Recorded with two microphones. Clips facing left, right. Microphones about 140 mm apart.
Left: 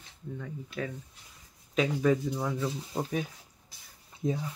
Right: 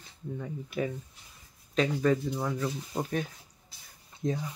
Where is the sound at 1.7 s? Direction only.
5° left (ahead or behind).